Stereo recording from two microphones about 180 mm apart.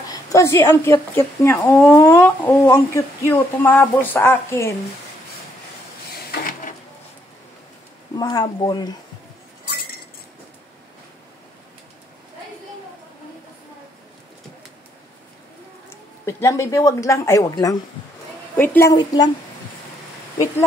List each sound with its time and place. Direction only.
0.1 s a woman's voice: 15° left (ahead or behind)
6.1 s a sound: 55° left (ahead or behind)
8.2 s a woman's voice: 20° left (ahead or behind)
16.3 s a woman's voice: 15° left (ahead or behind)